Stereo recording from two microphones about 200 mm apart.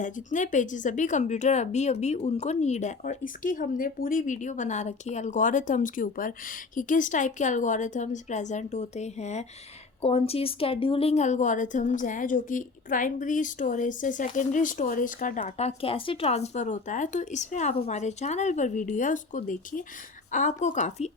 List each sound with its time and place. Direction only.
0.0 s a woman's voice: 40° left (ahead or behind)